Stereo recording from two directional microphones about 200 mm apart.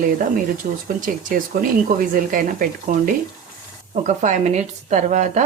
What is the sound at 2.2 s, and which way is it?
Speech, 45° right (ahead or behind).